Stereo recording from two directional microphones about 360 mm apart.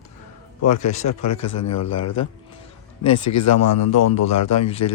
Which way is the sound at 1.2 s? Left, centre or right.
Left.